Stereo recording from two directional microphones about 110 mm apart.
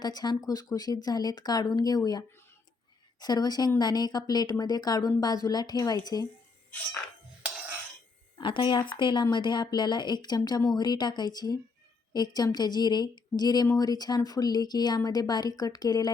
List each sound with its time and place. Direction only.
0.0 s speech: 40° left (ahead or behind)
8.4 s speech: 50° left (ahead or behind)